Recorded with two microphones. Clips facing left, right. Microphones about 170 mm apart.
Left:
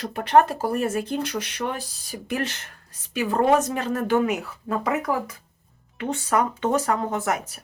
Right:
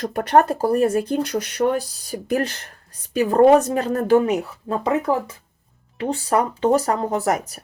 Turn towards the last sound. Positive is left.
turn(degrees=-35)  # may be behind; listen again after turning